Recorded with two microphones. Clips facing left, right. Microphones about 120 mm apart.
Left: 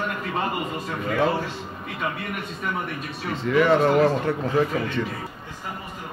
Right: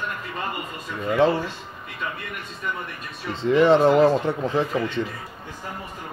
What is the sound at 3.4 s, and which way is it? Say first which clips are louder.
Speech: right 3 dB; 30° right (ahead or behind).